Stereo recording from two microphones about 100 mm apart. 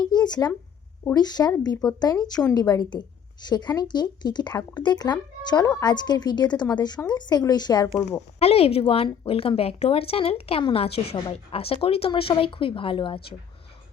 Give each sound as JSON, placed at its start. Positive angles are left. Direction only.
{"t": 0.0, "sound": "a sound", "side_deg": 45}
{"t": 1.1, "sound": "a woman's voice", "side_deg": 40}
{"t": 8.4, "sound": "a woman's voice", "side_deg": 90}